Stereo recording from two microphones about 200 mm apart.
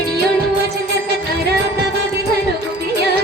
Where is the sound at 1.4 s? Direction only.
55° right (ahead or behind).